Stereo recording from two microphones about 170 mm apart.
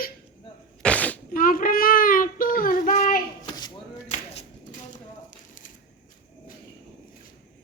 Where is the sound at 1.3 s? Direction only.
55° left (ahead or behind).